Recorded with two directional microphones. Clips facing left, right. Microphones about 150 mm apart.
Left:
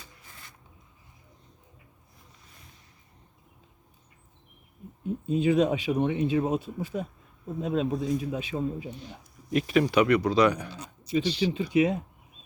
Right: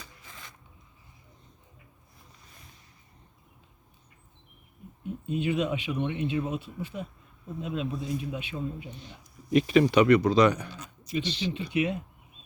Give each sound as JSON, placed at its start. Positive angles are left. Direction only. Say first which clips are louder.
{"t": 0.0, "sound": "a sound", "louder": "right 3 dB", "side_deg": -90}
{"t": 5.0, "sound": "speech", "louder": "left 5 dB", "side_deg": 35}
{"t": 9.5, "sound": "speech", "louder": "right 3 dB", "side_deg": 0}
{"t": 10.7, "sound": "speech", "louder": "left 5 dB", "side_deg": 30}